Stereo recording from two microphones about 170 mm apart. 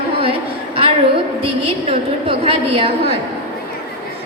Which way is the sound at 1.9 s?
35° right (ahead or behind).